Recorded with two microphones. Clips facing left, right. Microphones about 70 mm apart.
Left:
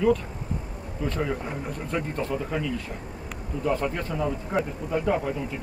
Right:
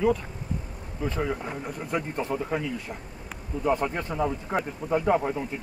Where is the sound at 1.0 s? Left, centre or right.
Centre.